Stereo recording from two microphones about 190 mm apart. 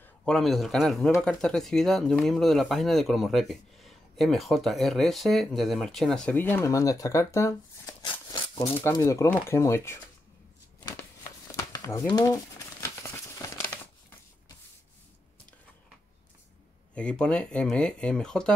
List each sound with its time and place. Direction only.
0.0 s speech: 5° left (ahead or behind)
11.5 s a sound: 15° left (ahead or behind)
12.1 s crumpling: 20° left (ahead or behind)
16.9 s speech: 5° left (ahead or behind)